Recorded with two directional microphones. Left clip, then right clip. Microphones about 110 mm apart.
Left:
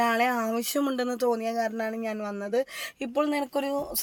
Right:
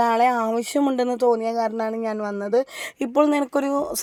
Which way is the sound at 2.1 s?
30° right (ahead or behind).